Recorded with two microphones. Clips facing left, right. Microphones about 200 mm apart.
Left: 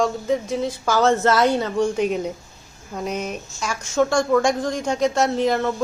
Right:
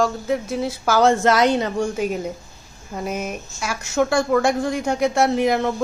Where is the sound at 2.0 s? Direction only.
5° right (ahead or behind).